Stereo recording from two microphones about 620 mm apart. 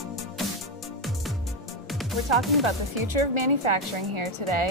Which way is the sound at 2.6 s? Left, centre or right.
Right.